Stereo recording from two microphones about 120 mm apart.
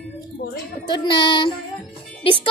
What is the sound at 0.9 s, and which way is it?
Child singing, 40° left (ahead or behind).